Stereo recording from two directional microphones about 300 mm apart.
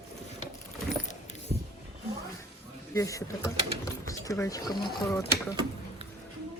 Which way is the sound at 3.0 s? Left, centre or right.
Centre.